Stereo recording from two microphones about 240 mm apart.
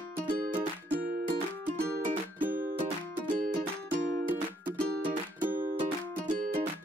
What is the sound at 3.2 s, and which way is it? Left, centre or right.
Music, right.